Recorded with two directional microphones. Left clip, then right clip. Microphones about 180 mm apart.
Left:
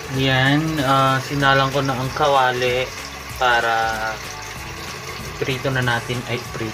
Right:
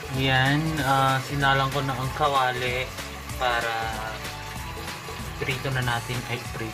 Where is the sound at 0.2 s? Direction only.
5° left (ahead or behind).